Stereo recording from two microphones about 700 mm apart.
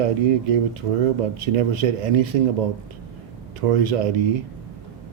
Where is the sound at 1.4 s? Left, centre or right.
Right.